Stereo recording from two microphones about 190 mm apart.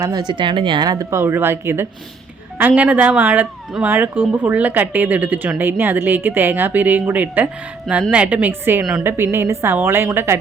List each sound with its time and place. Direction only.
0.0 s speech: 20° right (ahead or behind)